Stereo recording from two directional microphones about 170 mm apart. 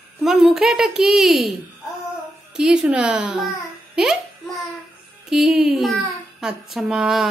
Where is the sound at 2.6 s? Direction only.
5° right (ahead or behind).